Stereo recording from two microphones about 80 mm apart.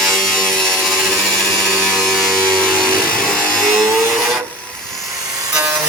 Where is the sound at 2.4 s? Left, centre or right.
Centre.